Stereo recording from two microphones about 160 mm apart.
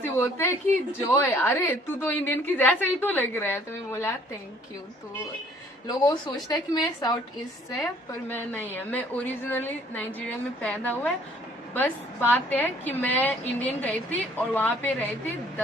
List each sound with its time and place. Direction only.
0.0 s a woman's voice: 10° left (ahead or behind)
5.9 s a woman's voice: 25° left (ahead or behind); by 15.0 s 10° left (ahead or behind)